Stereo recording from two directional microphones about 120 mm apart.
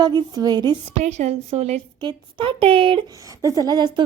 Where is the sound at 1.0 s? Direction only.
70° right (ahead or behind).